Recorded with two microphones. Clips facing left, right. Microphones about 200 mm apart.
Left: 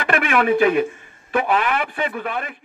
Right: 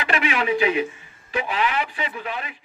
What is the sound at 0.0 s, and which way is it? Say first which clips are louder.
A man's voice: left 4 dB; 50° left (ahead or behind).